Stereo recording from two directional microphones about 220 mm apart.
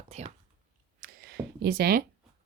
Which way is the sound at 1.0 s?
45° right (ahead or behind).